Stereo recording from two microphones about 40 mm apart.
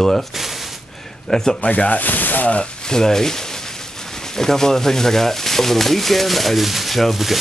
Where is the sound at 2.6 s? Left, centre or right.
Left.